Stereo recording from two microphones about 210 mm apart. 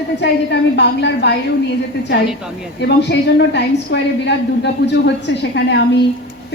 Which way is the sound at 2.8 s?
55° left (ahead or behind).